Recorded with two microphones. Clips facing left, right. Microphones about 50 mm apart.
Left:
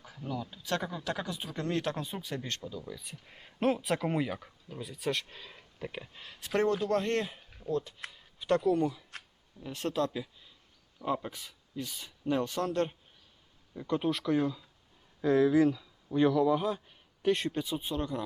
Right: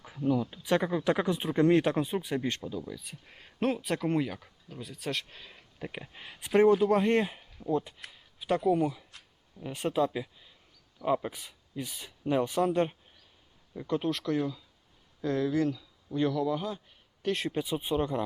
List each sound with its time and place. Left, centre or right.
0.2 s speech: centre
2.8 s speech: centre
5.9 s speech: centre
8.1 s speech: centre
13.7 s speech: centre
15.2 s speech: centre
17.5 s speech: centre